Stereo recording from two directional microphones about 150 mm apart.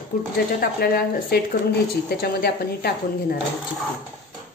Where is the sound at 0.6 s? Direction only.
85° left.